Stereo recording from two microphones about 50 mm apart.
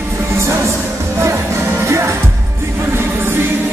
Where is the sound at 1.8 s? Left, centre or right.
Right.